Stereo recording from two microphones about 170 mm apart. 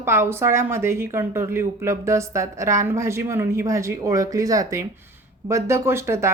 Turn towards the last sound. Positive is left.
turn(degrees=-15)  # may be behind; listen again after turning